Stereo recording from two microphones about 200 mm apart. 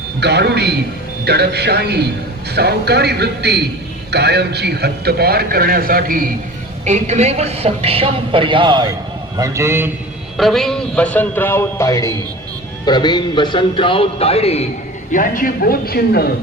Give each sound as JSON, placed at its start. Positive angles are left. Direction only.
{"t": 0.2, "sound": "a man's voice", "side_deg": -55}
{"t": 10.3, "sound": "speech", "side_deg": 0}
{"t": 15.1, "sound": "speech", "side_deg": 45}